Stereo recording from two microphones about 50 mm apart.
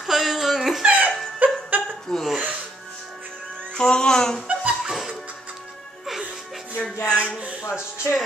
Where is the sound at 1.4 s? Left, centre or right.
Right.